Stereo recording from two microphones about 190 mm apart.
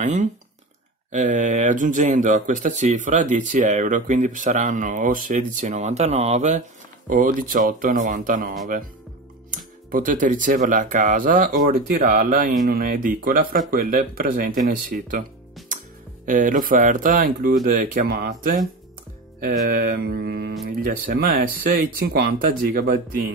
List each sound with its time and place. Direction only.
0.0 s speech: 40° right (ahead or behind)
16.3 s speech: 45° right (ahead or behind)
19.4 s mantra: 50° right (ahead or behind)
20.6 s speech: 45° right (ahead or behind)